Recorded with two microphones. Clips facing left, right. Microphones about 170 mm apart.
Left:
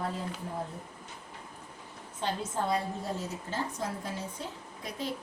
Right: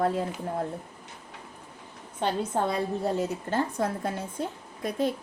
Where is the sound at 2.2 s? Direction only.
65° right (ahead or behind).